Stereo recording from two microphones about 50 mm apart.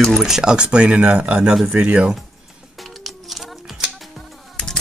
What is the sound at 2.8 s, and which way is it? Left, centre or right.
Music, centre.